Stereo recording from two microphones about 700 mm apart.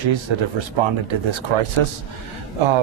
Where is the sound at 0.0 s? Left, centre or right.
Right.